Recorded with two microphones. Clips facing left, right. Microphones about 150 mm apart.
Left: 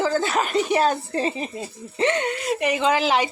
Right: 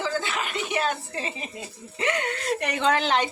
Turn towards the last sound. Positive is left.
turn(degrees=5)  # may be behind; listen again after turning